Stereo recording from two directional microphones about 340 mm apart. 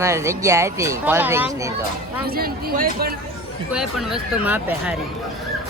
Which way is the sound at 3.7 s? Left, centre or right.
Centre.